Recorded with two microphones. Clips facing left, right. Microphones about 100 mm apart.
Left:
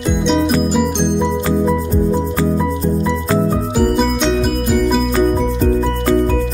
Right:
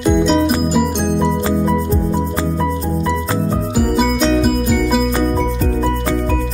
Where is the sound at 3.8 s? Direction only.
Centre (ahead or behind).